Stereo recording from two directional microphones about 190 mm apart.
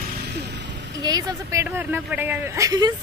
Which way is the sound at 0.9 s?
20° right (ahead or behind).